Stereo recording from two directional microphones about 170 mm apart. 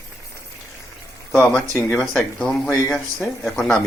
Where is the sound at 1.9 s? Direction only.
5° left (ahead or behind).